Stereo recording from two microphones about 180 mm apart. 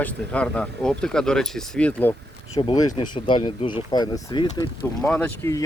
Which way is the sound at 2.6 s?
25° left (ahead or behind).